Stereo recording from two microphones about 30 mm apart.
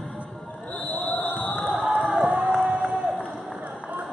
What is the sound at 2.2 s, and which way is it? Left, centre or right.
Crowd, right.